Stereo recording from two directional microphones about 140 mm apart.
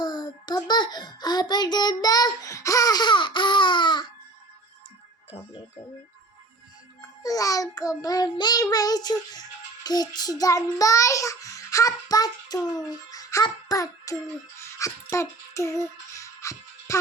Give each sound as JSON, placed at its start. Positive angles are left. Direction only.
{"t": 0.0, "sound": "a sound", "side_deg": 30}
{"t": 7.2, "sound": "child singing", "side_deg": 25}
{"t": 8.7, "sound": "speech", "side_deg": 30}
{"t": 14.6, "sound": "music", "side_deg": 25}